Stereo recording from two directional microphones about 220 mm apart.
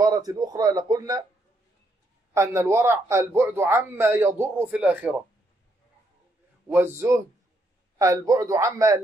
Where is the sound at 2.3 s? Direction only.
10° right (ahead or behind).